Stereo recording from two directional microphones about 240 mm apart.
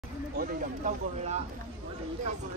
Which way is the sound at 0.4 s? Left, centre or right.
Right.